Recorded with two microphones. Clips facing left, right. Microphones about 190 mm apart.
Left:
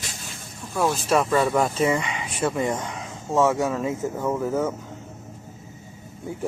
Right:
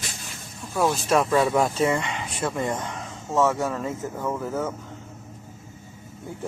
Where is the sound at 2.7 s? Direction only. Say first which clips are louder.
Left 1 dB; 15° left (ahead or behind).